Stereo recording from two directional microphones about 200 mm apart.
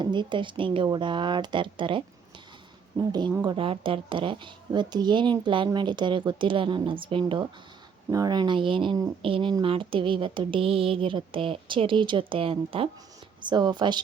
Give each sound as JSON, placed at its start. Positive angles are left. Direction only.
{"t": 0.0, "sound": "speech", "side_deg": -25}